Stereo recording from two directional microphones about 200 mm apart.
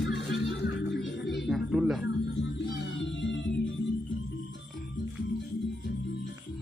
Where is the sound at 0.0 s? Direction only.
65° left (ahead or behind).